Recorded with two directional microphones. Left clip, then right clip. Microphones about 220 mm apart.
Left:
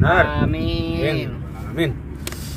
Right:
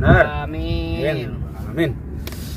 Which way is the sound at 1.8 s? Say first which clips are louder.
Right 1 dB; 10° right (ahead or behind).